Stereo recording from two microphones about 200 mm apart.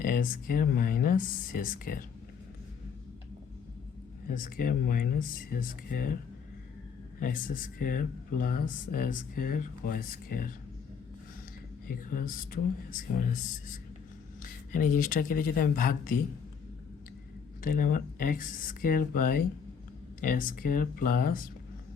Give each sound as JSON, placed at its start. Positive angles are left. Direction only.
{"t": 0.0, "sound": "speech", "side_deg": 45}
{"t": 4.3, "sound": "speech", "side_deg": 45}
{"t": 7.2, "sound": "speech", "side_deg": 40}
{"t": 11.9, "sound": "speech", "side_deg": 45}
{"t": 17.6, "sound": "speech", "side_deg": 45}